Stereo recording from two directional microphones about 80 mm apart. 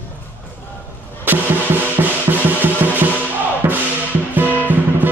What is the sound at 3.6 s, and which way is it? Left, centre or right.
Music, right.